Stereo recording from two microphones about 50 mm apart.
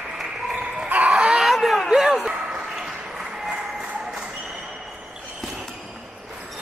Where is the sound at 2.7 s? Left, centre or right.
Centre.